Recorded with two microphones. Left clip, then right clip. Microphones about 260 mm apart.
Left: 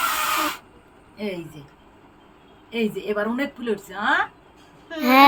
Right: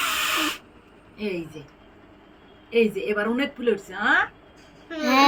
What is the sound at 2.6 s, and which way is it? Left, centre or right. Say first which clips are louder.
Speech: right 4 dB; centre.